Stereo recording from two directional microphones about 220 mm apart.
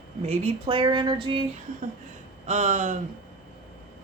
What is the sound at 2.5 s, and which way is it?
Speech, 30° right (ahead or behind).